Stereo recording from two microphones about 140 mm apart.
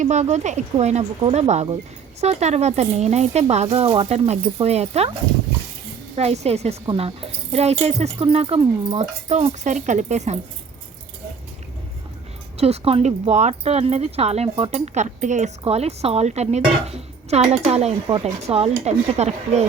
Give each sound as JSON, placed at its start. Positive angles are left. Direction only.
{"t": 0.0, "sound": "speech", "side_deg": -55}
{"t": 6.1, "sound": "speech", "side_deg": -50}
{"t": 12.5, "sound": "speech", "side_deg": -45}
{"t": 15.6, "sound": "speech", "side_deg": -50}